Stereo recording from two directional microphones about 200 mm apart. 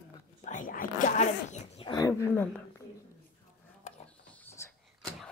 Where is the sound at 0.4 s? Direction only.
40° left (ahead or behind).